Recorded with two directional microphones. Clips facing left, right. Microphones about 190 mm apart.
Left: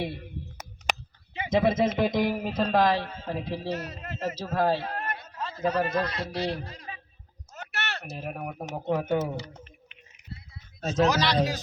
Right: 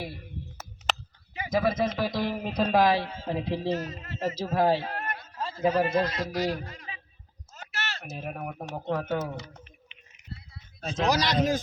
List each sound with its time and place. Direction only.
0.0 s a sound: 25° left (ahead or behind)
2.0 s speech: 20° left (ahead or behind)
2.4 s a man's voice: centre (ahead or behind); by 3.7 s 15° right (ahead or behind)
3.8 s a man's voice: 65° left (ahead or behind)
4.4 s a man's voice: 15° right (ahead or behind)
5.4 s a sound: 30° right (ahead or behind)
5.6 s speech: 5° right (ahead or behind)
5.9 s a man's voice: 25° right (ahead or behind)
6.1 s speech: 30° left (ahead or behind)
7.5 s a sound: 65° left (ahead or behind)
8.0 s speech: centre (ahead or behind)
9.1 s speech: 30° left (ahead or behind)
11.0 s a man's voice: 40° right (ahead or behind)